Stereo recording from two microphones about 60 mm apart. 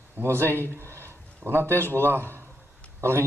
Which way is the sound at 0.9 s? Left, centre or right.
Right.